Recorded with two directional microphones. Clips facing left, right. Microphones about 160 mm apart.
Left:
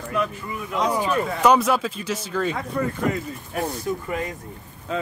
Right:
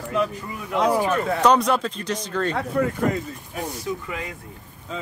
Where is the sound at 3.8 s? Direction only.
45° left (ahead or behind).